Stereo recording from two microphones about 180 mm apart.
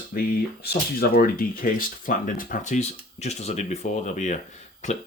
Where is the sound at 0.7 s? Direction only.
60° left (ahead or behind).